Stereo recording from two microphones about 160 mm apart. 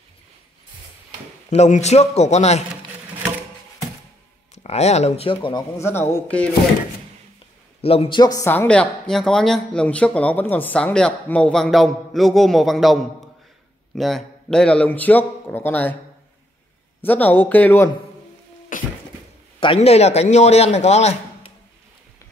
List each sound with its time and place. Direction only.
1.5 s a man's voice: 45° left (ahead or behind)
4.6 s speech: 45° left (ahead or behind)
5.8 s speech: 15° left (ahead or behind)
7.8 s speech: 35° left (ahead or behind)
8.5 s a man's voice: 10° left (ahead or behind)
17.0 s speech: 10° left (ahead or behind)
18.7 s a sound: 55° left (ahead or behind)
19.6 s a man's voice: 35° left (ahead or behind)